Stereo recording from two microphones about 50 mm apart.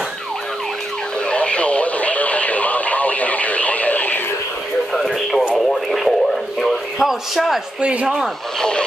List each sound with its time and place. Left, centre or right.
1.2 s radio: left
4.9 s radio: centre
6.6 s a sound: centre
7.8 s speech: right
8.5 s speech: centre